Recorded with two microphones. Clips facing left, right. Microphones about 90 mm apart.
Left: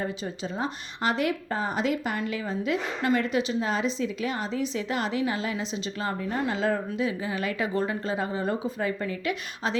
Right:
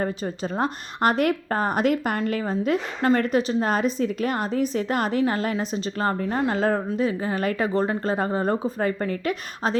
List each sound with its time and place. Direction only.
0.0 s a woman's voice: 50° right (ahead or behind)